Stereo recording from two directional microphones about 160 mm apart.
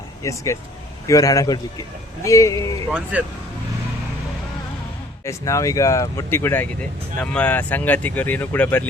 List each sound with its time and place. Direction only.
0.2 s speech: 20° left (ahead or behind)
2.9 s speech: 10° right (ahead or behind)
5.2 s speech: 20° left (ahead or behind)